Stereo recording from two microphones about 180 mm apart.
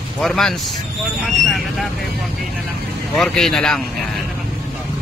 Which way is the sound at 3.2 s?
Centre (ahead or behind).